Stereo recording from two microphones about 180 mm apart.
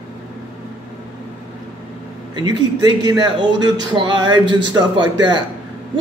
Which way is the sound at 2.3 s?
25° right (ahead or behind).